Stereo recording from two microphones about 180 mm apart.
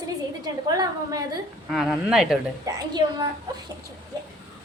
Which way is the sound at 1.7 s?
Centre (ahead or behind).